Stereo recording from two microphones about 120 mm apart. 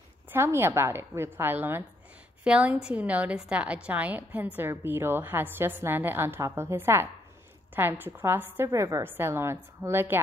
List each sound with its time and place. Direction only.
0.3 s a woman's voice: 20° right (ahead or behind)